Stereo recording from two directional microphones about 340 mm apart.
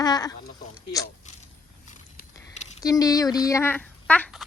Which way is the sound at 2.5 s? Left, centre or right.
Centre.